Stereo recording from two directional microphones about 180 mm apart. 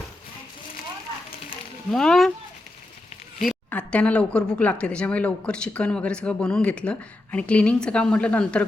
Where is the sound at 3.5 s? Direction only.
5° left (ahead or behind).